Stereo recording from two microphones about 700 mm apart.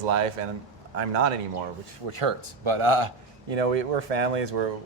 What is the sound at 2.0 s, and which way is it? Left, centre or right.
Speech, right.